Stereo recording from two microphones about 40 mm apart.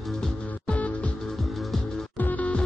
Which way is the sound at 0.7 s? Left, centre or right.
Left.